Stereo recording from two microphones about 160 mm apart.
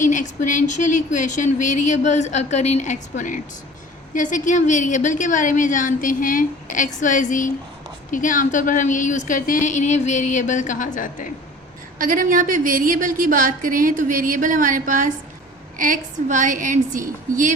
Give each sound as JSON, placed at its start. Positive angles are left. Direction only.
{"t": 0.0, "sound": "speech", "side_deg": 50}
{"t": 11.9, "sound": "a woman's voice", "side_deg": -60}